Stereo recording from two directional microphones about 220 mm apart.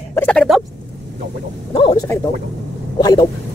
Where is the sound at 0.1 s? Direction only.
5° left (ahead or behind).